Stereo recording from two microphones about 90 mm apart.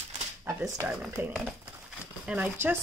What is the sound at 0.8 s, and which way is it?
Speech, 25° right (ahead or behind).